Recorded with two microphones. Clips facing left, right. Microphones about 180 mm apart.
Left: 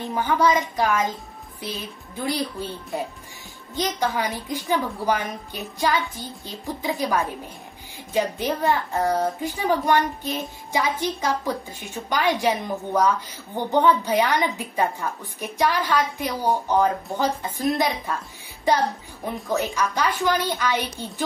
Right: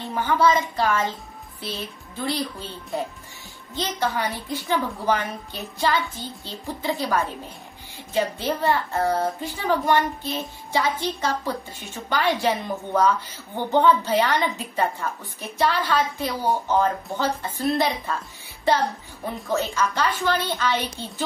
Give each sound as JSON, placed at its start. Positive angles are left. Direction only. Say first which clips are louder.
{"t": 0.0, "sound": "a woman's voice", "louder": "even", "side_deg": 10}
{"t": 2.2, "sound": "a woman's voice", "louder": "left 1 dB", "side_deg": 10}
{"t": 3.7, "sound": "a woman's voice", "louder": "left 1 dB", "side_deg": 15}
{"t": 19.4, "sound": "a woman's voice", "louder": "even", "side_deg": 15}